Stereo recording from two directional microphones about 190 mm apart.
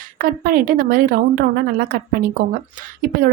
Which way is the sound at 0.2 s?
50° right (ahead or behind).